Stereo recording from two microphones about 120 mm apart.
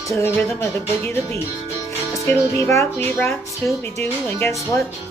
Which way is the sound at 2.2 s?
20° left (ahead or behind).